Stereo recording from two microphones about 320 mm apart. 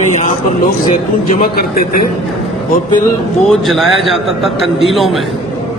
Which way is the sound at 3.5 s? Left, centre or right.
Centre.